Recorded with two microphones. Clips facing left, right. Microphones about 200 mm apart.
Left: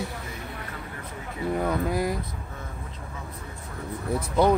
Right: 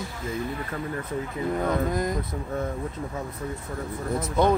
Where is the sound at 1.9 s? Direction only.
10° left (ahead or behind).